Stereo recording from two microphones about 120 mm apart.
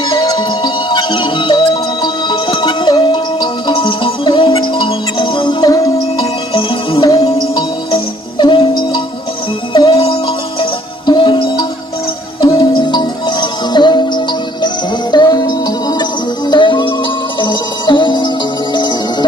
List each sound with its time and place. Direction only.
0.0 s music: 40° left (ahead or behind)
6.5 s music: 45° left (ahead or behind)